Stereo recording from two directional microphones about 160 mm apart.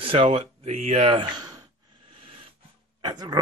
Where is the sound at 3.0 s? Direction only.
25° right (ahead or behind).